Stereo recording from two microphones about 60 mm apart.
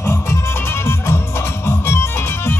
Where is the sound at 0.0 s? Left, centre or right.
Left.